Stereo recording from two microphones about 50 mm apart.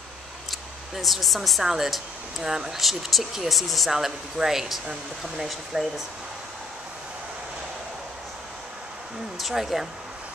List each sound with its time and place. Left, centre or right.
0.5 s speech: centre
9.4 s speech: centre